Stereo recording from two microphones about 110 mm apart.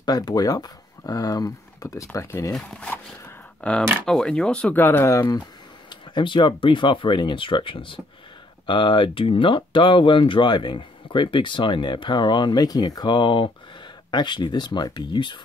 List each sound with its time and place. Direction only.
0.0 s speech: 40° left (ahead or behind)
2.5 s speech: 5° left (ahead or behind)
2.9 s zipper: 15° left (ahead or behind)
4.0 s speech: 5° left (ahead or behind); by 5.2 s 25° left (ahead or behind)
5.9 s speech: 45° left (ahead or behind)